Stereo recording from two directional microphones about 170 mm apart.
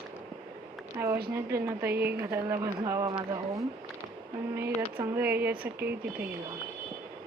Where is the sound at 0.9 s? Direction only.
15° right (ahead or behind).